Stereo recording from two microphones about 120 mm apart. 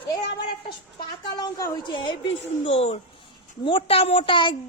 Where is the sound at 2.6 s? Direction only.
60° left (ahead or behind).